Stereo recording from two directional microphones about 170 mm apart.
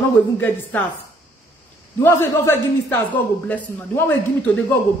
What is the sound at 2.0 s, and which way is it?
A man's voice, 15° left (ahead or behind).